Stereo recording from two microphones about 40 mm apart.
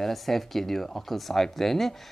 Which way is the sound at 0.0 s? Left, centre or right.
Centre.